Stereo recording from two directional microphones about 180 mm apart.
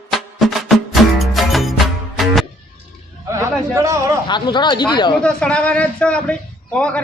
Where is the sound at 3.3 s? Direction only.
15° right (ahead or behind).